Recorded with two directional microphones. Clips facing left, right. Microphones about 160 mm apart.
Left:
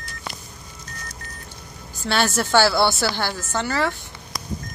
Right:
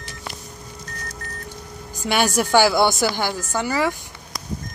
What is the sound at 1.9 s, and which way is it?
A woman's voice, 15° right (ahead or behind).